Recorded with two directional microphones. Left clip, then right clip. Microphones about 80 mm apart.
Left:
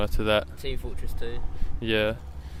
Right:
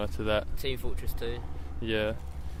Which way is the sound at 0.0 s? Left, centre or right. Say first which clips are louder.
Left 5 dB; left.